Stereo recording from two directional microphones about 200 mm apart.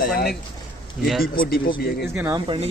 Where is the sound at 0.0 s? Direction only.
50° left (ahead or behind).